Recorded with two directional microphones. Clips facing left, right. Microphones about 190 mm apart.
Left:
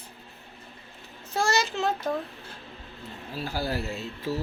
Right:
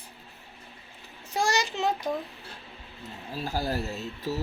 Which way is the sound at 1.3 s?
15° right (ahead or behind).